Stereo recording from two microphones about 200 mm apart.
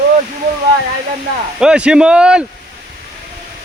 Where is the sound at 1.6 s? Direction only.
5° right (ahead or behind).